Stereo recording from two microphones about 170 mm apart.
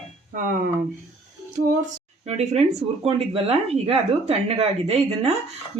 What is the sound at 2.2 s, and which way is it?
Speech, 40° right (ahead or behind).